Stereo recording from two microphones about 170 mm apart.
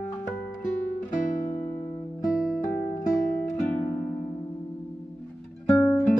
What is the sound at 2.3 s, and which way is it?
Music, centre (ahead or behind).